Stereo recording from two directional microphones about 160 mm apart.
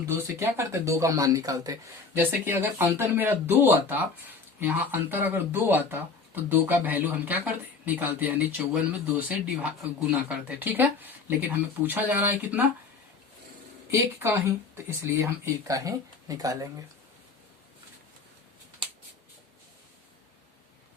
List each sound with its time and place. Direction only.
0.3 s speech: 15° right (ahead or behind)
13.9 s speech: 15° right (ahead or behind)